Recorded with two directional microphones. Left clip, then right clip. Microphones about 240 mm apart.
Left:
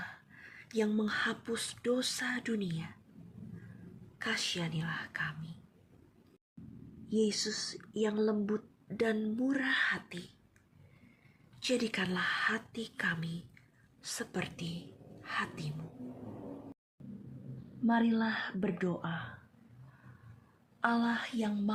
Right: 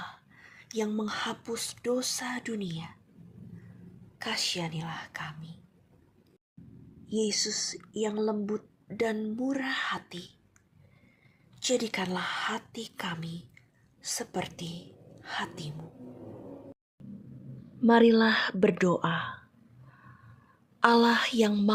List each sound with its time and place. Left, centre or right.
0.0 s a sound: centre
1.8 s speech: centre
4.2 s speech: centre
7.1 s speech: centre
11.6 s a woman's voice: centre
17.8 s speech: right
20.8 s speech: right